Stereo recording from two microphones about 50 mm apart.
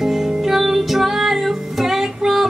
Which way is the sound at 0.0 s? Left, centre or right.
Centre.